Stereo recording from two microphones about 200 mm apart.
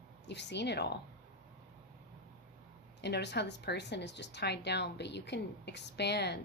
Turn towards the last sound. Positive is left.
turn(degrees=55)  # may be behind; listen again after turning